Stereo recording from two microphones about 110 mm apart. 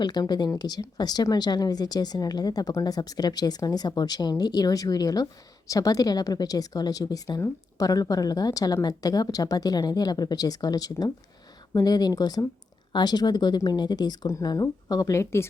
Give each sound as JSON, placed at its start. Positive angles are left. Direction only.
{"t": 0.0, "sound": "speech", "side_deg": 40}